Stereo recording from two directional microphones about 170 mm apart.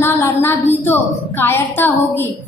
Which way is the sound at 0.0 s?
15° left (ahead or behind).